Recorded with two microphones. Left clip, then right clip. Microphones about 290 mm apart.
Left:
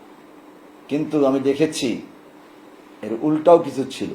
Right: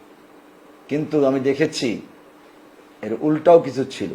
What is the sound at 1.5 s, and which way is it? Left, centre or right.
Speech, right.